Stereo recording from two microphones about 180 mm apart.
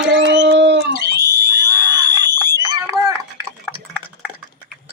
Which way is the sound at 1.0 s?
65° right (ahead or behind).